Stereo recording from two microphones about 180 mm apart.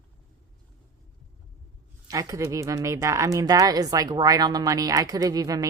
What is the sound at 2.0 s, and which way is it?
A woman's voice, 20° right (ahead or behind).